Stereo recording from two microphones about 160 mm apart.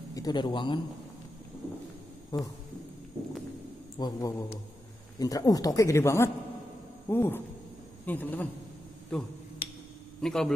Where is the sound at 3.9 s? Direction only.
25° left (ahead or behind); by 10.5 s 5° left (ahead or behind).